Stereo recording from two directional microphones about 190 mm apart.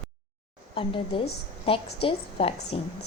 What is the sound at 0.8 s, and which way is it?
A woman's voice, 30° left (ahead or behind).